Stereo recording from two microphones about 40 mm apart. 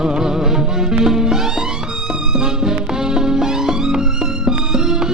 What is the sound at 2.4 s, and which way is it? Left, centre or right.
Music, centre.